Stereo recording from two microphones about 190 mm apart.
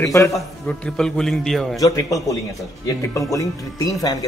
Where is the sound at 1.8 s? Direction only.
15° left (ahead or behind).